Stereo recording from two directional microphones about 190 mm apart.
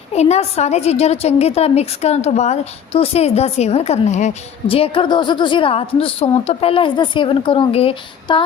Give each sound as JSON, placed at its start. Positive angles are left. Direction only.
{"t": 0.1, "sound": "a woman's voice", "side_deg": 35}